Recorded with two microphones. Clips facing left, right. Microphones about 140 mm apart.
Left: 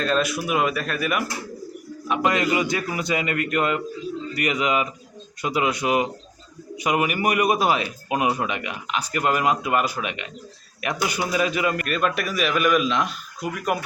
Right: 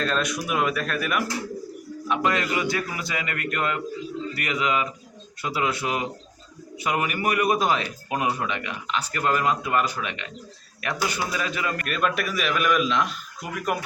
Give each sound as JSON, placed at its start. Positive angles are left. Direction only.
{"t": 0.0, "sound": "a man's voice", "side_deg": 5}
{"t": 2.2, "sound": "a man's voice", "side_deg": 20}
{"t": 11.9, "sound": "a man's voice", "side_deg": 0}